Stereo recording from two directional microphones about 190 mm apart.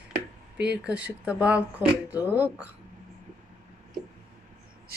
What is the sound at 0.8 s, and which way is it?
Speech, 5° right (ahead or behind).